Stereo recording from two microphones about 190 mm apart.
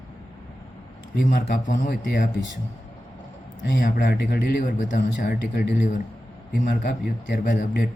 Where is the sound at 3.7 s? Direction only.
45° left (ahead or behind).